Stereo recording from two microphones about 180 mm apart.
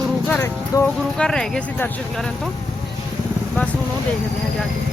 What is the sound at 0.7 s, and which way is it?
Speech, 20° left (ahead or behind).